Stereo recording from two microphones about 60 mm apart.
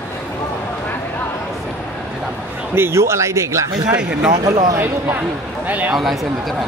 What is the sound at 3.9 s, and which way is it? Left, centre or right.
Speech, centre.